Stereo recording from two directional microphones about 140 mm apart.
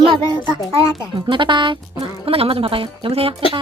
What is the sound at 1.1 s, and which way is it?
Speech, 35° right (ahead or behind).